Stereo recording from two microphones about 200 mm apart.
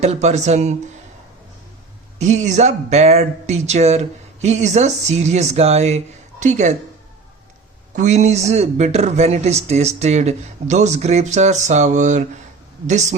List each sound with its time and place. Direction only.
0.0 s speech: 35° right (ahead or behind)
2.1 s speech: 35° right (ahead or behind)
7.9 s speech: 35° right (ahead or behind)